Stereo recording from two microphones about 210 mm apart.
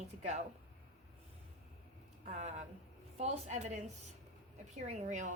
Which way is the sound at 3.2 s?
35° right (ahead or behind).